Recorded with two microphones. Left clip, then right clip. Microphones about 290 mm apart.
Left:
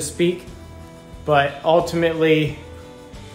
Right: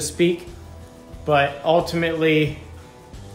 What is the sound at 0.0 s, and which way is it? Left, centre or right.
Speech, centre.